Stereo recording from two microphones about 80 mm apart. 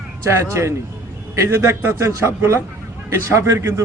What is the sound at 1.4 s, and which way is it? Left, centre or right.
Speech, right.